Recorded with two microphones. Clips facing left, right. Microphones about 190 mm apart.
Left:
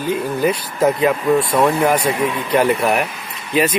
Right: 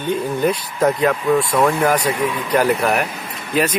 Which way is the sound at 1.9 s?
25° left (ahead or behind).